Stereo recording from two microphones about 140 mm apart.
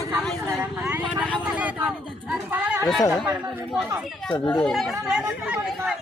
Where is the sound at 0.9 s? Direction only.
10° right (ahead or behind).